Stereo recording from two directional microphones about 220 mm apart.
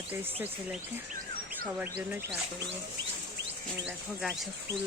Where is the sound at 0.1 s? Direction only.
10° right (ahead or behind).